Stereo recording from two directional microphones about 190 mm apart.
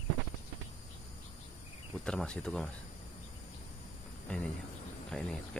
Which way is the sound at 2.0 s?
5° left (ahead or behind).